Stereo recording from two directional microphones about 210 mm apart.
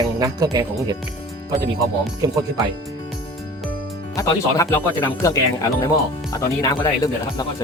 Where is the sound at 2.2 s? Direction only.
20° right (ahead or behind).